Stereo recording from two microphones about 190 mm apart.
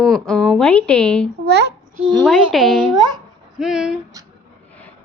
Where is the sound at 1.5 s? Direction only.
60° right (ahead or behind).